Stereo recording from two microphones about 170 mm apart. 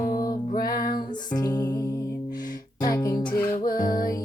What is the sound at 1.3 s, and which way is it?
Music, 25° left (ahead or behind).